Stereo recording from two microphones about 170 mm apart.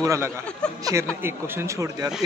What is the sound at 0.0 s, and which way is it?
Speech, 20° right (ahead or behind).